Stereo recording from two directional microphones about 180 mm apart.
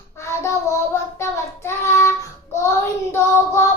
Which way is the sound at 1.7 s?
15° left (ahead or behind).